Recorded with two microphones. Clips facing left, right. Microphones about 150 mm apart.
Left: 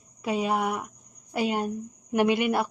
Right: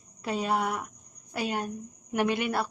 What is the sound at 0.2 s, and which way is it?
Speech, 10° left (ahead or behind).